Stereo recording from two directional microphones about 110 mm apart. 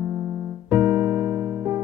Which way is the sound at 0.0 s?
30° right (ahead or behind).